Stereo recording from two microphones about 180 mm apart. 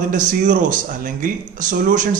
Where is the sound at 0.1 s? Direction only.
45° right (ahead or behind).